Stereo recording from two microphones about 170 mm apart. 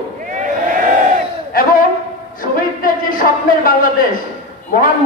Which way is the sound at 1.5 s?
60° left (ahead or behind).